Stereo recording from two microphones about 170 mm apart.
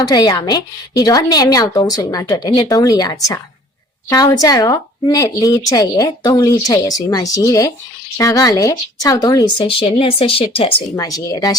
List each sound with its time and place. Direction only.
0.0 s a woman's voice: 25° left (ahead or behind)
9.6 s speech: 35° left (ahead or behind)
10.9 s a woman's voice: 20° left (ahead or behind)